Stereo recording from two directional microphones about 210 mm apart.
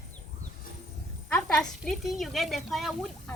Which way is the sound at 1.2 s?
5° left (ahead or behind).